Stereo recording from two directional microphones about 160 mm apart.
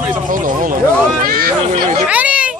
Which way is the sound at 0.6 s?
60° right (ahead or behind).